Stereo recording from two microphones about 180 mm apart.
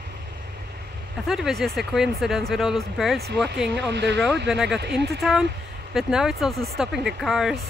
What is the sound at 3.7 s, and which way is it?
Speech, 75° right (ahead or behind).